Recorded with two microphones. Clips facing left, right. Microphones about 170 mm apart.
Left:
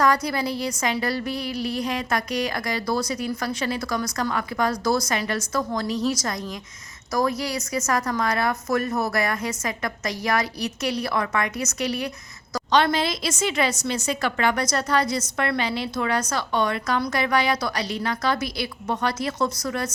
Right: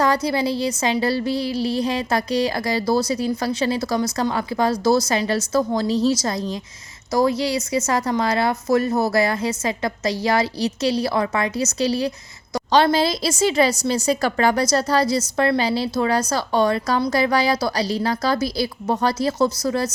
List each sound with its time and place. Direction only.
0.0 s a woman's voice: 30° right (ahead or behind)